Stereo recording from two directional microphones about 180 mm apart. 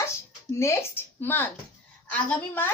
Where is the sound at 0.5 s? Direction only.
15° left (ahead or behind).